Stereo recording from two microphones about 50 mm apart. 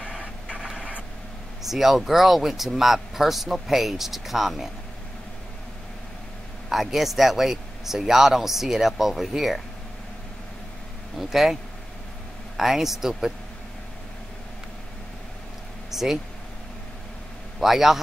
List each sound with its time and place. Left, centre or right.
0.5 s a sound: centre
1.6 s speech: centre
6.7 s speech: centre
11.1 s a man's voice: centre
12.5 s speech: centre
15.9 s a sound: centre
17.6 s a man's voice: centre